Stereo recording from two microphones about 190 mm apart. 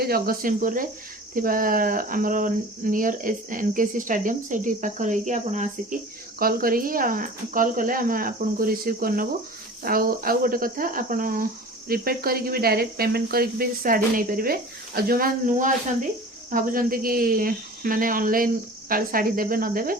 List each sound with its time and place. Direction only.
0.0 s speech: 50° right (ahead or behind)
6.4 s speech: 50° right (ahead or behind)